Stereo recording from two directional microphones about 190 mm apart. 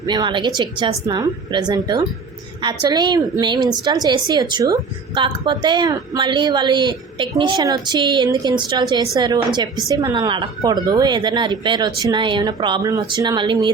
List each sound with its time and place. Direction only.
0.0 s a woman's voice: 20° right (ahead or behind)